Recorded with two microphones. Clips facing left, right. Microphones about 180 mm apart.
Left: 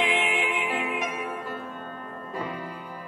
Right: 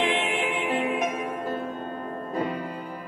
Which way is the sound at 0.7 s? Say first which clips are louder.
Right 4 dB; 45° right (ahead or behind).